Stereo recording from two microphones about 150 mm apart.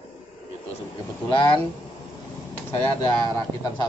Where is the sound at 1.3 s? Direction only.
30° left (ahead or behind).